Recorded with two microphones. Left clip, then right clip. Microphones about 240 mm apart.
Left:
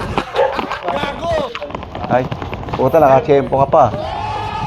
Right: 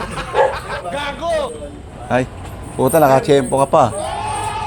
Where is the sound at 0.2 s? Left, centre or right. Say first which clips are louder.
Even; centre.